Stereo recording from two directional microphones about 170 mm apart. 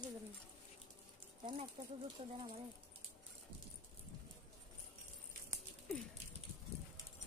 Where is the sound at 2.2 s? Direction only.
35° right (ahead or behind).